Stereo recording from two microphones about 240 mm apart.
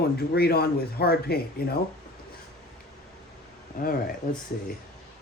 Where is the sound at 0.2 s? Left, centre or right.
Left.